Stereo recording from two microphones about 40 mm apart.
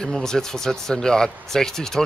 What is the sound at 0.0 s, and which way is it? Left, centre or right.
Speech, centre.